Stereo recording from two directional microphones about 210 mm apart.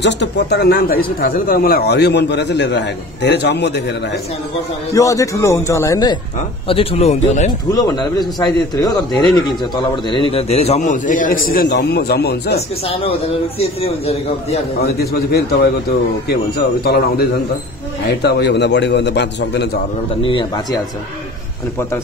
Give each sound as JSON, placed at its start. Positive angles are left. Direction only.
{"t": 0.0, "sound": "speech", "side_deg": 55}
{"t": 4.9, "sound": "a man's voice", "side_deg": 15}
{"t": 6.7, "sound": "speech", "side_deg": 25}
{"t": 7.7, "sound": "a man's voice", "side_deg": 20}
{"t": 10.8, "sound": "speech", "side_deg": 40}
{"t": 12.5, "sound": "a man's voice", "side_deg": 30}
{"t": 15.0, "sound": "a man's voice", "side_deg": 50}
{"t": 20.2, "sound": "a man's voice", "side_deg": 25}